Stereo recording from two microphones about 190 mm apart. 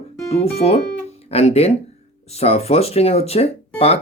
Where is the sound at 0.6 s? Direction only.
35° left (ahead or behind).